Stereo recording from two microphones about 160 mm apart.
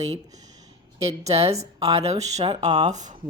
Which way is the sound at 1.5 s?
25° right (ahead or behind).